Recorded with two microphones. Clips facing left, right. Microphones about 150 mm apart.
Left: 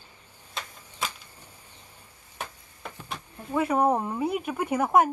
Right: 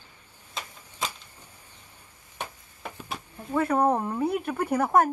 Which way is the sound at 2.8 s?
10° right (ahead or behind).